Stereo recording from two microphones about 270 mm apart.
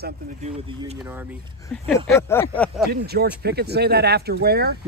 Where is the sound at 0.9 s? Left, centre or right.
Centre.